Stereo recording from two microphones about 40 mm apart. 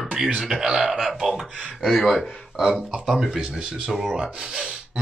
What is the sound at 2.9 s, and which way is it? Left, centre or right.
Speech, centre.